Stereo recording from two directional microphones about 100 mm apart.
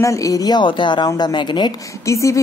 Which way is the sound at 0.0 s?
35° left (ahead or behind).